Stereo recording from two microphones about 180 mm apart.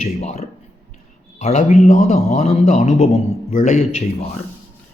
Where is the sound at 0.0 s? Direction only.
35° left (ahead or behind).